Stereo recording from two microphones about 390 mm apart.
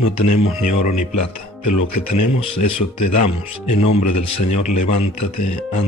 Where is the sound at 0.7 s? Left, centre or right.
Centre.